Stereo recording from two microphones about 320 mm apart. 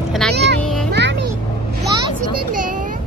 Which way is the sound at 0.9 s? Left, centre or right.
Right.